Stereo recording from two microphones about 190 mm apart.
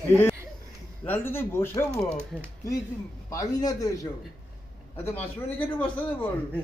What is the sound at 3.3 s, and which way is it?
A man's voice, 20° left (ahead or behind).